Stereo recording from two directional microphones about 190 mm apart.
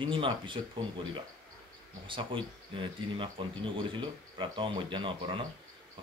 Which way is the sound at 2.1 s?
25° right (ahead or behind).